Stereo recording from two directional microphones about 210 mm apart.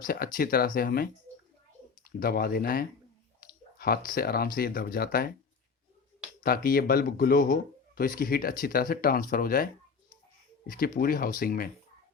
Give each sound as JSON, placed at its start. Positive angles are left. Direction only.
{"t": 0.0, "sound": "speech", "side_deg": 45}
{"t": 2.0, "sound": "speech", "side_deg": 45}
{"t": 6.4, "sound": "speech", "side_deg": 45}
{"t": 10.7, "sound": "speech", "side_deg": 45}